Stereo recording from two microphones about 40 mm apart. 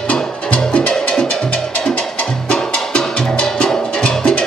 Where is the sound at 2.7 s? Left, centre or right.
Left.